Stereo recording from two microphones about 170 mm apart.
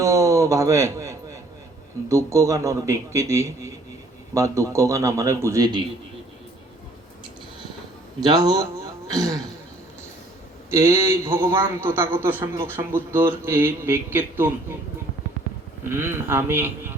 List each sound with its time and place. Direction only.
0.0 s a sound: 20° right (ahead or behind)
2.0 s a man's voice: 15° right (ahead or behind)
8.2 s a man's voice: 25° right (ahead or behind)
10.7 s a man's voice: 15° right (ahead or behind)
15.8 s a man's voice: 15° right (ahead or behind)